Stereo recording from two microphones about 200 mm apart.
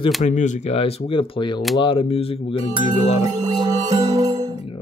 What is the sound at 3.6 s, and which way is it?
Music, 20° right (ahead or behind).